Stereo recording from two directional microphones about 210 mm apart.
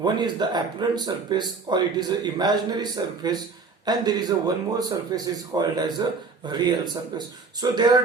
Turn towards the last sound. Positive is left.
turn(degrees=-20)  # may be behind; listen again after turning